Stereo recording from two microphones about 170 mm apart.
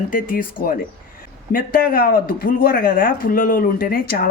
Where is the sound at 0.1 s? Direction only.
55° left (ahead or behind).